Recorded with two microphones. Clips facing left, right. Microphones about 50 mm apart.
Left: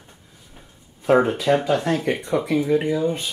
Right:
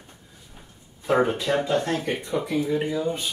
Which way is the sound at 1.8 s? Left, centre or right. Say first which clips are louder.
Left 4 dB; left.